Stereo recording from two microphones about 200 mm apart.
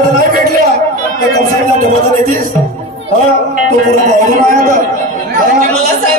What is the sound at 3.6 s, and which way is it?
A man's voice, 40° right (ahead or behind).